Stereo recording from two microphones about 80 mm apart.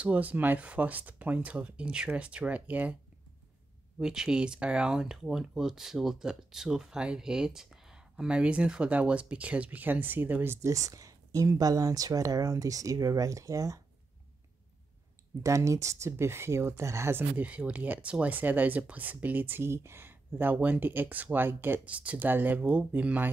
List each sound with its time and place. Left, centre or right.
0.0 s speech: centre
4.0 s speech: centre; by 10.7 s right
10.7 s speech: right
15.4 s speech: right
17.5 s speech: centre